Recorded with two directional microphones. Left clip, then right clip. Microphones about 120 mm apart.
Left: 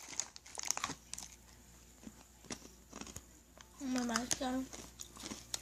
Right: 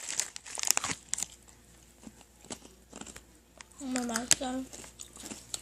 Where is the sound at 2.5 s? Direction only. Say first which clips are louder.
Right 3 dB; 5° right (ahead or behind).